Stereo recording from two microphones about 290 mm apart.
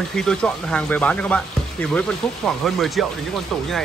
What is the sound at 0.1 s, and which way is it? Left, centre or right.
Speech, centre.